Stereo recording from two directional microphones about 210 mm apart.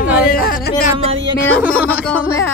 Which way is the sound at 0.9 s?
25° right (ahead or behind).